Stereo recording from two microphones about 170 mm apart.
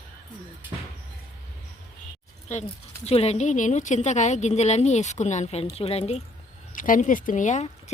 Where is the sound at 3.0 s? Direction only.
35° left (ahead or behind).